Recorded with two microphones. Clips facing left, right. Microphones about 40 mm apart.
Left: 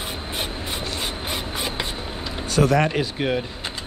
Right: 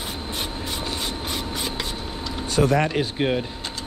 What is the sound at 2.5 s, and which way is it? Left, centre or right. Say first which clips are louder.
Speech: left 1 dB; left.